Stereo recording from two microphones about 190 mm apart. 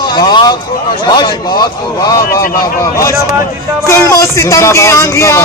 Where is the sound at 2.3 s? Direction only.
50° left (ahead or behind).